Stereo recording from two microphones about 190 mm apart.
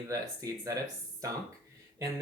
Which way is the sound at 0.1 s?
15° right (ahead or behind).